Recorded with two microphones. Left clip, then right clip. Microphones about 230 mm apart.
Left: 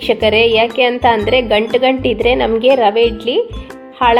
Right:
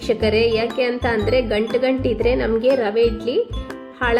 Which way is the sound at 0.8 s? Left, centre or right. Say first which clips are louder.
Left 7 dB; left.